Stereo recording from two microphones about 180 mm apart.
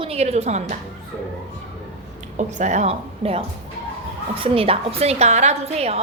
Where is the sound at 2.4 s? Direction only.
40° right (ahead or behind).